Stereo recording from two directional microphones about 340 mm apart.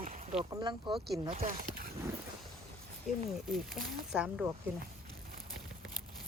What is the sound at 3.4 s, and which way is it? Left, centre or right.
Speech, centre.